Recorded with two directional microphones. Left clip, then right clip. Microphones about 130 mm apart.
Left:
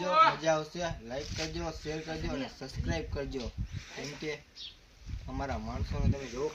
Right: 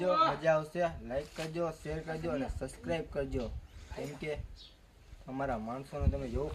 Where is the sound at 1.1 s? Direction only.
15° right (ahead or behind).